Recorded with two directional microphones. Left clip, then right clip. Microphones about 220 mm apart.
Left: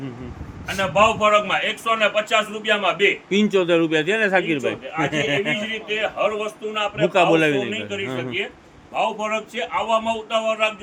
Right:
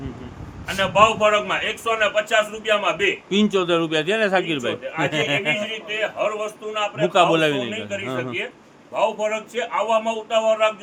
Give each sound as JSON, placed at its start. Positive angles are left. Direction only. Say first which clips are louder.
{"t": 0.9, "sound": "a man's voice", "louder": "even", "side_deg": -20}